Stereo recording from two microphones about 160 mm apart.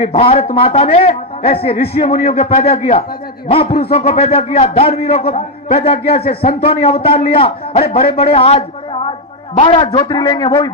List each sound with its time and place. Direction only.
0.0 s a man's voice: 35° left (ahead or behind)